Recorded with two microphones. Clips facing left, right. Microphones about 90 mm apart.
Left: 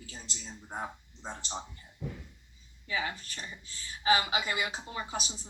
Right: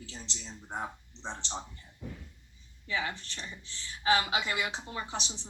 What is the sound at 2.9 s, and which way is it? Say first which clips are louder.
A woman's voice: even; 10° left (ahead or behind).